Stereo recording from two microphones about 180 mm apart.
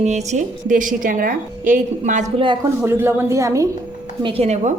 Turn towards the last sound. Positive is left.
turn(degrees=-40)  # may be behind; listen again after turning